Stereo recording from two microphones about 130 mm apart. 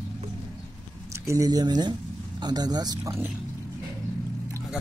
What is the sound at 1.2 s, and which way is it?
Speech, 25° right (ahead or behind).